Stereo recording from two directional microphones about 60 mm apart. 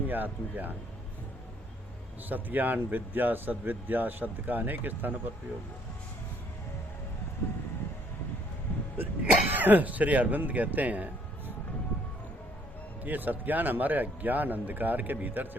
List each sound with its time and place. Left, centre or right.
0.1 s speech: right
2.3 s speech: right
9.0 s speech: right
13.1 s speech: right